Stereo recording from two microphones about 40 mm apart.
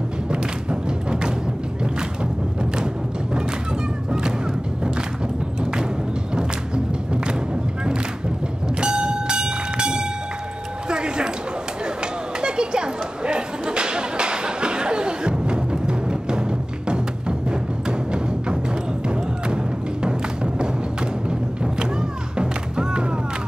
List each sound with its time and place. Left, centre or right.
0.3 s music: right
2.6 s music: centre
5.6 s music: right
8.8 s a sound: right
10.9 s music: right
12.4 s chatter: right
19.0 s music: right
22.4 s music: right